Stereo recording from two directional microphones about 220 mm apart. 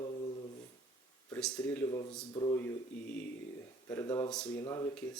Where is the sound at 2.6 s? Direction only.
5° left (ahead or behind).